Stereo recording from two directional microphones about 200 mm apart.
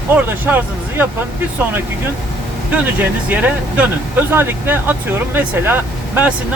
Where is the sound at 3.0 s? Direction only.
10° right (ahead or behind).